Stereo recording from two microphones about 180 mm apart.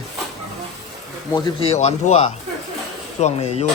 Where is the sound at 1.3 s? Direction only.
30° left (ahead or behind).